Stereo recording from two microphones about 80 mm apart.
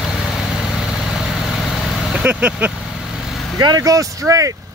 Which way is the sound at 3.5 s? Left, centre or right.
Right.